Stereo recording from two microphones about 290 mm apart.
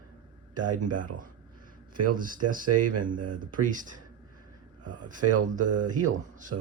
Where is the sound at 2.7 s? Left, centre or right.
Right.